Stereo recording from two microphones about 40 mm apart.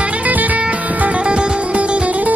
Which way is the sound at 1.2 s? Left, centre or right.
Right.